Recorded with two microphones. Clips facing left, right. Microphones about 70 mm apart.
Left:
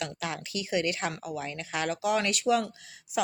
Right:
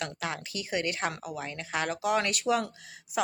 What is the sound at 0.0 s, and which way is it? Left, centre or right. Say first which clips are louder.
A woman's voice: even; right.